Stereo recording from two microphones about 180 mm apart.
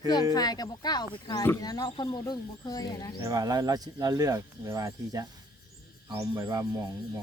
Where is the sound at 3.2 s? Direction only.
20° right (ahead or behind).